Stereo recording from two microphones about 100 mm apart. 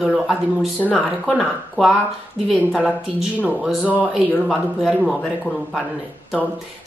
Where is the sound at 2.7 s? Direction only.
5° right (ahead or behind).